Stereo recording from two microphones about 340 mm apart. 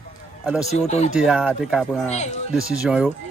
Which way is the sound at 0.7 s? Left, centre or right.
Centre.